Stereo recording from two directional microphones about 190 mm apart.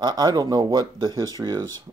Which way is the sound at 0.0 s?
20° right (ahead or behind).